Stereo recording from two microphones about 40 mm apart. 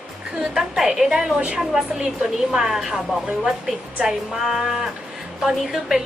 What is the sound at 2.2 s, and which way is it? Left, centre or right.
Speech, centre.